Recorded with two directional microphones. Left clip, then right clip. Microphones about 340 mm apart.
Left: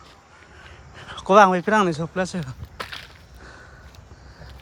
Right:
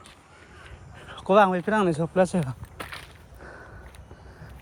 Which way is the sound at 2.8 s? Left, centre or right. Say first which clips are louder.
Left 5 dB; centre.